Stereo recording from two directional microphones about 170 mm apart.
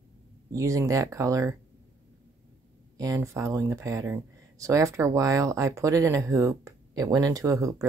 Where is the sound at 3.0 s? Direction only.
20° right (ahead or behind).